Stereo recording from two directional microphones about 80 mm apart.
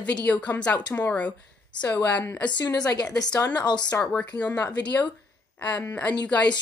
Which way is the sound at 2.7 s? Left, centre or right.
Left.